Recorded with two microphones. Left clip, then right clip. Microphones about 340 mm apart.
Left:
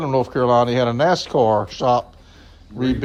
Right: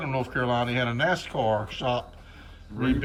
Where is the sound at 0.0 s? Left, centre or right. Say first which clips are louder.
Left 9 dB; left.